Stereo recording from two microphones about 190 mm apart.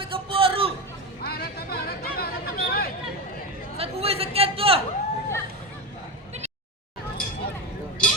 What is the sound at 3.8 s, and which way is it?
A man's voice, 30° right (ahead or behind).